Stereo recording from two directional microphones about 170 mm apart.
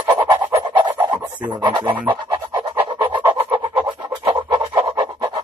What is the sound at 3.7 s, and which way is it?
Scratch, 30° right (ahead or behind).